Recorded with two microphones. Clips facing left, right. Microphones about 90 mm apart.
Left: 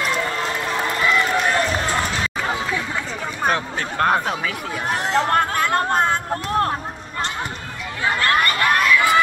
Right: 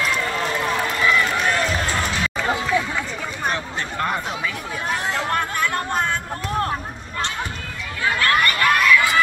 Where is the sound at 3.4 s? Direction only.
45° left (ahead or behind).